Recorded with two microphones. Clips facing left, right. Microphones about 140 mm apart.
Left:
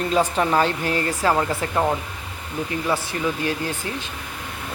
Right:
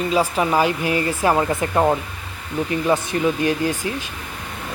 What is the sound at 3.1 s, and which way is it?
Speech, 30° right (ahead or behind).